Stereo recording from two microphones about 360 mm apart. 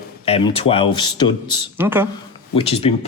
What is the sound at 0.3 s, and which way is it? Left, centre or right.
A man's voice, centre.